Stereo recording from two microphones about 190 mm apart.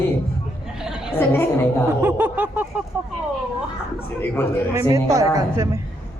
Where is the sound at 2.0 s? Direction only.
10° right (ahead or behind).